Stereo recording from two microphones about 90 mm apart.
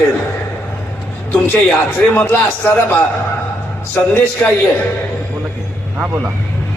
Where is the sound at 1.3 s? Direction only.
20° left (ahead or behind).